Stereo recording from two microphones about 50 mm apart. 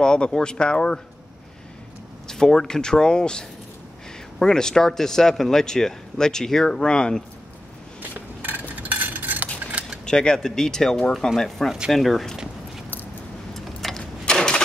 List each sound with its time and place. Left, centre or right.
0.0 s speech: centre
2.2 s speech: centre
8.4 s a sound: right
10.0 s speech: centre
13.6 s vehicle: centre
14.2 s vehicle: centre